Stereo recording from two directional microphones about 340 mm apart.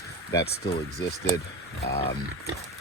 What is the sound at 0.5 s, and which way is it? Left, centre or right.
Speech, left.